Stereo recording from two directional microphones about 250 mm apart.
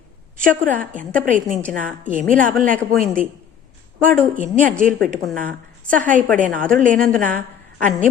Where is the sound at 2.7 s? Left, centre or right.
Centre.